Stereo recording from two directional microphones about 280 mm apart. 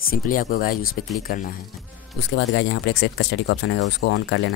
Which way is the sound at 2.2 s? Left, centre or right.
Left.